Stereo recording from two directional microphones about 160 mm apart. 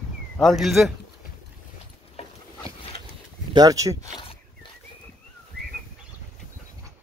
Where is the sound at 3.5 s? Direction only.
20° right (ahead or behind).